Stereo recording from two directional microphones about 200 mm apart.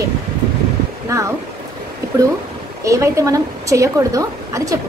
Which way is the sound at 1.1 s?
15° right (ahead or behind).